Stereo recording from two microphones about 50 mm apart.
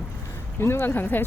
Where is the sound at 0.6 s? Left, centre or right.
Left.